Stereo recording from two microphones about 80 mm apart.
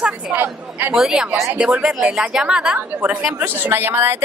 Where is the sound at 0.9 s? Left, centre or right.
Centre.